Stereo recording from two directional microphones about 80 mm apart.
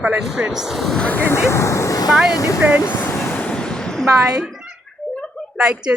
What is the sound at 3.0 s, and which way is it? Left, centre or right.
Vehicle, left.